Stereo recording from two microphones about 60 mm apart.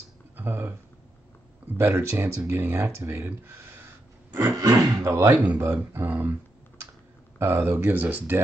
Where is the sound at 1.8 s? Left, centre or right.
Right.